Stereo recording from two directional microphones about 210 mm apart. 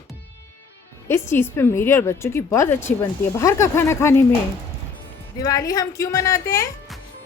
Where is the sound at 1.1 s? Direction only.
10° left (ahead or behind).